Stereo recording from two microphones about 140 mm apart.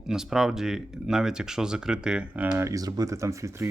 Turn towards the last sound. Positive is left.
turn(degrees=-20)  # may be behind; listen again after turning